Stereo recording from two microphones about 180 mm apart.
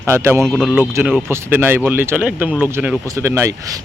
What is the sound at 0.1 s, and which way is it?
Speech, 15° right (ahead or behind).